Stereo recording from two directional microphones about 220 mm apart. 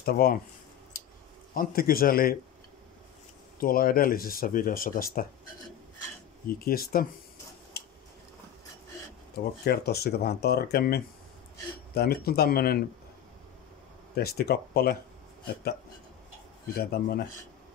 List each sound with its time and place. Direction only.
0.0 s speech: 45° left (ahead or behind)
1.5 s speech: 40° left (ahead or behind)
3.5 s speech: 40° left (ahead or behind)
6.4 s speech: 45° left (ahead or behind)
7.8 s a sound: 45° left (ahead or behind)
9.4 s speech: 45° left (ahead or behind)
14.1 s speech: 45° left (ahead or behind)
16.7 s speech: 45° left (ahead or behind)